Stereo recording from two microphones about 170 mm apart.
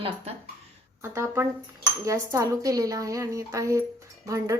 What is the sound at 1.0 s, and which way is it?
Speech, 15° right (ahead or behind).